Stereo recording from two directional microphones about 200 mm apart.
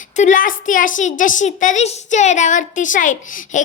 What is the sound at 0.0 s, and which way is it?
A woman's voice, 35° left (ahead or behind).